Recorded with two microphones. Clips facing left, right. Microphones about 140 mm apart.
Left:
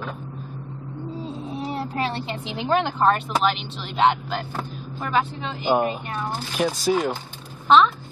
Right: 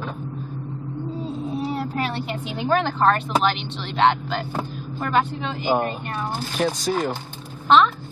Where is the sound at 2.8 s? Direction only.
5° left (ahead or behind).